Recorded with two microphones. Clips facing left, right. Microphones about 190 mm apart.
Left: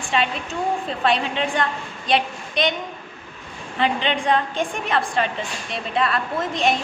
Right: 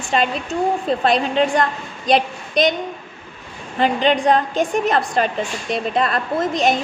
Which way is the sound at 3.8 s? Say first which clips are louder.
Right 5 dB; 40° right (ahead or behind).